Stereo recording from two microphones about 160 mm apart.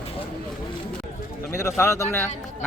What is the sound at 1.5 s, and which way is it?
Speech, 20° left (ahead or behind).